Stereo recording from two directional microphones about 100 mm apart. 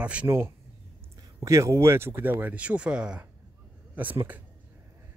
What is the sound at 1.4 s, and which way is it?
Speech, 30° right (ahead or behind).